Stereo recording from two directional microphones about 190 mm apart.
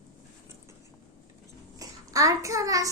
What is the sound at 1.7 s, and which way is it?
Child singing, 20° right (ahead or behind).